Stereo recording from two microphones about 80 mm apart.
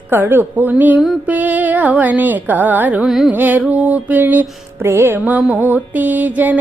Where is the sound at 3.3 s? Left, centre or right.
Right.